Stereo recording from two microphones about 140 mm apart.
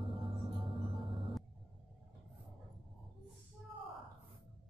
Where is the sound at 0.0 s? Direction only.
40° right (ahead or behind).